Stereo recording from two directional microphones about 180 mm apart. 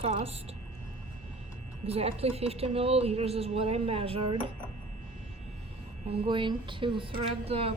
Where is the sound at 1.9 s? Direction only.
35° right (ahead or behind).